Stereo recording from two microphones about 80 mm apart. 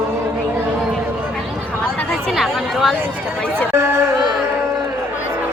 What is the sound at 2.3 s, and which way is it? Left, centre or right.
Chatter, centre.